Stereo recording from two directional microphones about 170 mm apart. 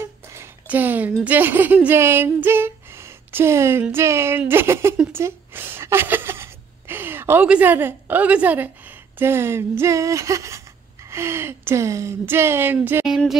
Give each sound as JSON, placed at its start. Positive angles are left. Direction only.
{"t": 0.0, "sound": "a sound", "side_deg": -15}
{"t": 1.2, "sound": "speech", "side_deg": -10}
{"t": 5.2, "sound": "gasp", "side_deg": -10}
{"t": 9.2, "sound": "speech", "side_deg": -15}